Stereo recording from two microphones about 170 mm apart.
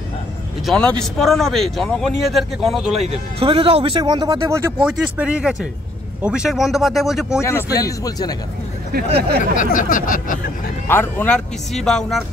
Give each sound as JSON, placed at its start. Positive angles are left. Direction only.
{"t": 0.7, "sound": "a man's voice", "side_deg": 5}
{"t": 3.1, "sound": "a man's voice", "side_deg": -35}
{"t": 7.4, "sound": "speech", "side_deg": 20}
{"t": 9.6, "sound": "a sound", "side_deg": 55}
{"t": 10.9, "sound": "a man's voice", "side_deg": 10}